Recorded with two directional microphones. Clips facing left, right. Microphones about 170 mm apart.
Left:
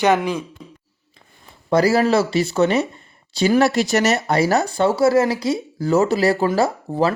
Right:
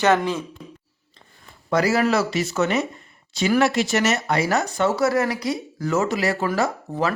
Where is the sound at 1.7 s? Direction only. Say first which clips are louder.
Left 4 dB; 30° left (ahead or behind).